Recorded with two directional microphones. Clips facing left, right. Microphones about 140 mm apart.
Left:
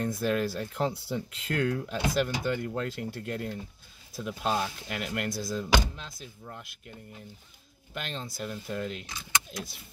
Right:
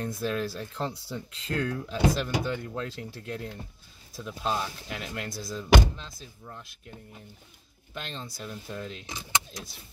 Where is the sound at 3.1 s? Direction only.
60° left (ahead or behind).